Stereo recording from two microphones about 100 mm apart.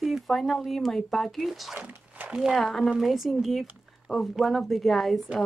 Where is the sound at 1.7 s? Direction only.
15° right (ahead or behind).